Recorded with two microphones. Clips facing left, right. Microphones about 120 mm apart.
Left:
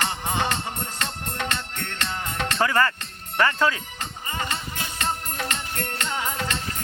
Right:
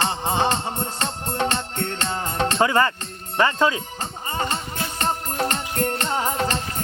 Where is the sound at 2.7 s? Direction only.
20° right (ahead or behind).